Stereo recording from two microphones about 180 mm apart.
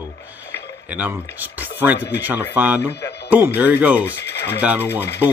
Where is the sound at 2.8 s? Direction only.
15° left (ahead or behind).